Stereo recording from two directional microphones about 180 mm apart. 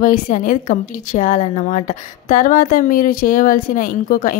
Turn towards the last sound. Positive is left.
turn(degrees=50)  # may be behind; listen again after turning